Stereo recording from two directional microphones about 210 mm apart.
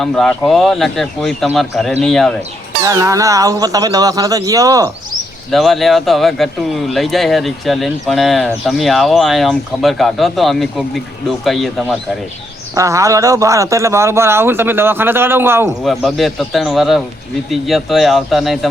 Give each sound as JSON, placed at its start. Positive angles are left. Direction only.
{"t": 0.0, "sound": "speech", "side_deg": 0}
{"t": 2.8, "sound": "speech", "side_deg": -15}
{"t": 5.5, "sound": "speech", "side_deg": 0}
{"t": 12.7, "sound": "speech", "side_deg": -15}
{"t": 15.8, "sound": "speech", "side_deg": 0}